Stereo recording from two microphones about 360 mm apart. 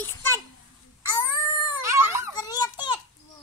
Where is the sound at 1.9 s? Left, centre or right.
Centre.